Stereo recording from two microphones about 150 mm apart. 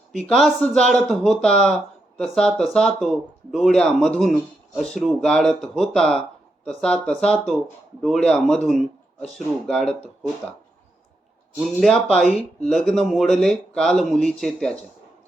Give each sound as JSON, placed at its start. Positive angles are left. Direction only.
{"t": 0.1, "sound": "speech", "side_deg": 0}
{"t": 11.8, "sound": "speech", "side_deg": 0}